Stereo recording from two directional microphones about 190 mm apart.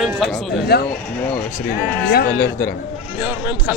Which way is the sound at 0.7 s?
60° left (ahead or behind).